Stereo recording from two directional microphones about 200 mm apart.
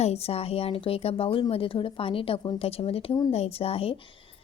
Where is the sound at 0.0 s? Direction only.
30° left (ahead or behind).